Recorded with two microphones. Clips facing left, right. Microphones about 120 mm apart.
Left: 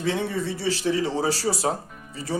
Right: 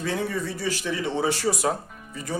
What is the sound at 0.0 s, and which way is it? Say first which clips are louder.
A man's voice: left 2 dB; 25° left (ahead or behind).